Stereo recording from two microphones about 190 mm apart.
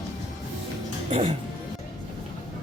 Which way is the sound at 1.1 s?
35° right (ahead or behind).